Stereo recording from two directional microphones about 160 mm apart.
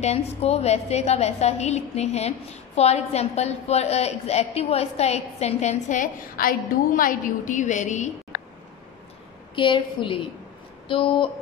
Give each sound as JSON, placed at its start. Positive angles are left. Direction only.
{"t": 0.0, "sound": "a woman's voice", "side_deg": 40}
{"t": 9.6, "sound": "a woman's voice", "side_deg": 30}